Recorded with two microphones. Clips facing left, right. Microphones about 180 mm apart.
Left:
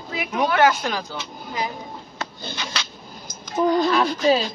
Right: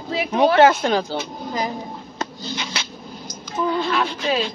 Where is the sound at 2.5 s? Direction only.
25° right (ahead or behind).